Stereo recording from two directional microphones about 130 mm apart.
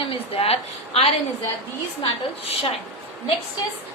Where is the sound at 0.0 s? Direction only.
45° left (ahead or behind).